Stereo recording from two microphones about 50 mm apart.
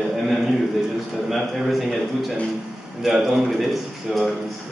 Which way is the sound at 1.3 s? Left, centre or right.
Centre.